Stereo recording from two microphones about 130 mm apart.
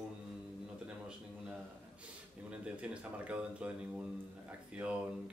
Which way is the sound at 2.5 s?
10° right (ahead or behind).